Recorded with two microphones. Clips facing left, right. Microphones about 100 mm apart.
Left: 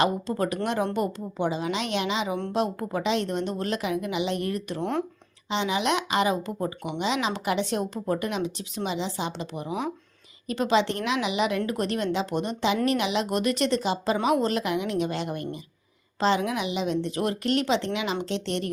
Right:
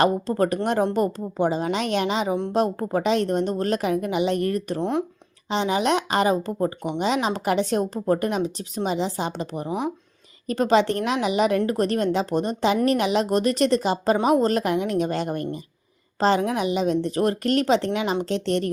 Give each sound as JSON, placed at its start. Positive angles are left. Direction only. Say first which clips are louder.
{"t": 0.0, "sound": "a woman's voice", "louder": "right 4 dB", "side_deg": -45}
{"t": 4.8, "sound": "speech", "louder": "right 2 dB", "side_deg": -20}
{"t": 5.5, "sound": "a woman's voice", "louder": "right 4 dB", "side_deg": -40}